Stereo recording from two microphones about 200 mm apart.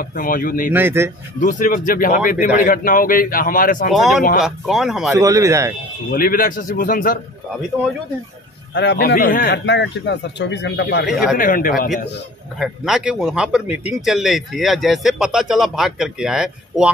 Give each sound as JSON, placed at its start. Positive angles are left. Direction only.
{"t": 0.0, "sound": "speech", "side_deg": 45}
{"t": 0.7, "sound": "speech", "side_deg": -10}
{"t": 1.4, "sound": "speech", "side_deg": 45}
{"t": 3.9, "sound": "a man's voice", "side_deg": 0}
{"t": 5.1, "sound": "speech", "side_deg": -15}
{"t": 6.1, "sound": "speech", "side_deg": 45}
{"t": 8.7, "sound": "speech", "side_deg": 55}
{"t": 11.1, "sound": "a man's voice", "side_deg": -5}
{"t": 11.3, "sound": "speech", "side_deg": 45}
{"t": 12.5, "sound": "a man's voice", "side_deg": 0}